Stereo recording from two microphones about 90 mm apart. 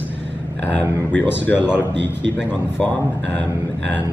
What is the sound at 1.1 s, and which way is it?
Speech, 20° left (ahead or behind).